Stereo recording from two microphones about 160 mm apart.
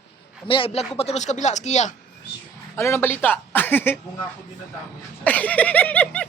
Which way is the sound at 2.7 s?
15° left (ahead or behind).